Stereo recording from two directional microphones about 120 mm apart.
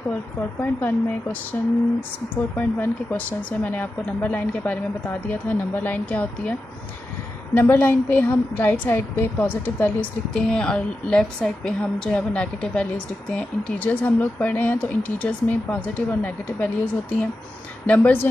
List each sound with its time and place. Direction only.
0.6 s a woman's voice: 15° left (ahead or behind)
2.5 s a woman's voice: 15° left (ahead or behind)
7.5 s a woman's voice: 15° left (ahead or behind)